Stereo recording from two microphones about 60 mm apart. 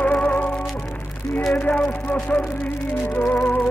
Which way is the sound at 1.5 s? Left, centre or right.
Left.